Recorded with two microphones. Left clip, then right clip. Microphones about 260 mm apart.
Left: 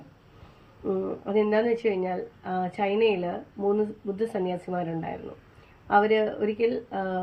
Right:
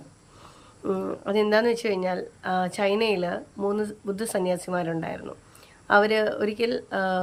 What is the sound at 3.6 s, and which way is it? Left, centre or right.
Speech, right.